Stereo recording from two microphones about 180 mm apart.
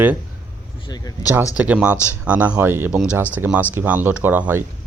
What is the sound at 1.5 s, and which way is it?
Speech, 5° right (ahead or behind).